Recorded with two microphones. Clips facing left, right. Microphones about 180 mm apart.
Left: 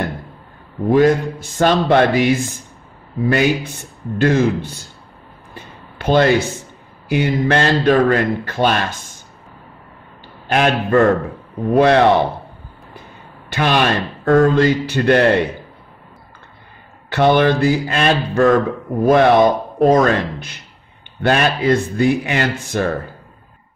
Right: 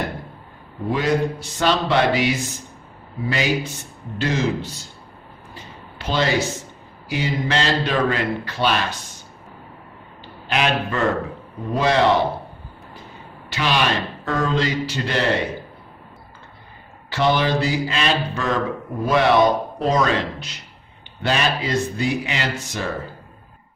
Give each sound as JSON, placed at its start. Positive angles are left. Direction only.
{"t": 0.8, "sound": "a man's voice", "side_deg": 50}
{"t": 5.5, "sound": "a sound", "side_deg": 55}
{"t": 7.1, "sound": "a man's voice", "side_deg": 60}
{"t": 10.5, "sound": "a man's voice", "side_deg": 50}
{"t": 13.5, "sound": "a man's voice", "side_deg": 55}
{"t": 17.1, "sound": "a man's voice", "side_deg": 55}